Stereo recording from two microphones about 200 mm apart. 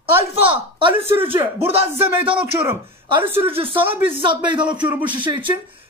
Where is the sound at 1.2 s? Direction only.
25° right (ahead or behind).